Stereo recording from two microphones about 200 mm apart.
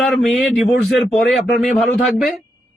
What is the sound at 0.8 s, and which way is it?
Speech, 55° left (ahead or behind).